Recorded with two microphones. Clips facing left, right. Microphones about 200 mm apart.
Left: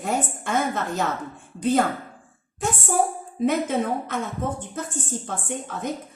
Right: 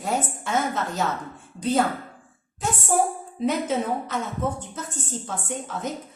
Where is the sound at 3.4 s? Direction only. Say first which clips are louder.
Left 2 dB; 55° left (ahead or behind).